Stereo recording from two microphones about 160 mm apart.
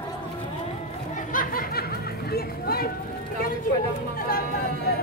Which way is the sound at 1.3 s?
60° left (ahead or behind).